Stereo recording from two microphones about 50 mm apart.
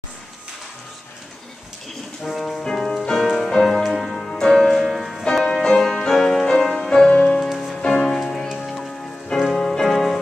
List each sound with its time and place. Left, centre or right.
2.2 s music: centre
5.3 s music: centre
7.1 s music: left
7.7 s music: centre